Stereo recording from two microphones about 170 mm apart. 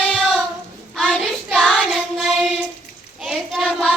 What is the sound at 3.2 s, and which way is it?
Hands, centre (ahead or behind).